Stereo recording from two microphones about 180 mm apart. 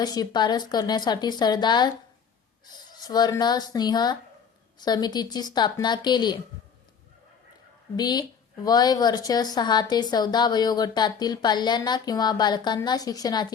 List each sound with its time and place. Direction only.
0.0 s a woman's voice: 20° left (ahead or behind)
2.9 s a woman's voice: 20° left (ahead or behind)
7.9 s a woman's voice: 25° left (ahead or behind)